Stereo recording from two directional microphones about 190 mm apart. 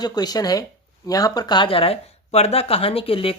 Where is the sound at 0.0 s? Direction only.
20° left (ahead or behind).